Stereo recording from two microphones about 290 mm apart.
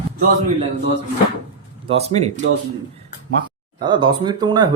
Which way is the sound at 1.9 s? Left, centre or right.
Right.